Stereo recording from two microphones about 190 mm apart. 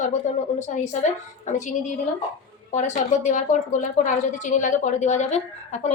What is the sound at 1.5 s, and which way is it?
Speech, 40° left (ahead or behind).